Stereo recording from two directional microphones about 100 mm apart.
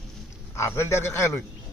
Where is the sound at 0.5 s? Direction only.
30° left (ahead or behind).